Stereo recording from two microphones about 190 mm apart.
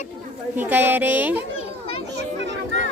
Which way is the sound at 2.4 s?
70° right (ahead or behind).